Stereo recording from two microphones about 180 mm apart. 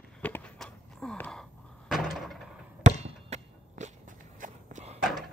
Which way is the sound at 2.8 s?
40° right (ahead or behind).